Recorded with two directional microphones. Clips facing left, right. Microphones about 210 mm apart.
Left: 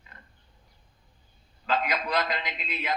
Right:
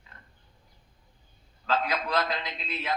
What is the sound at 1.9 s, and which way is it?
Speech, 5° left (ahead or behind).